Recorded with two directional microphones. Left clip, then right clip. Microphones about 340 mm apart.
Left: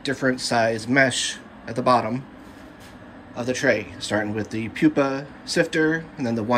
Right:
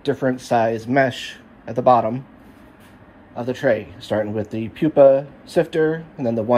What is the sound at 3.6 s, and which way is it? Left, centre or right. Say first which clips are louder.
Speech: right 2 dB; centre.